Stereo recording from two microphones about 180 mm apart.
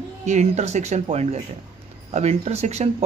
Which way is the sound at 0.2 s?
40° right (ahead or behind).